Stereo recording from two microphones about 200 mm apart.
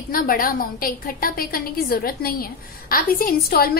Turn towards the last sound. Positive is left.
turn(degrees=50)  # may be behind; listen again after turning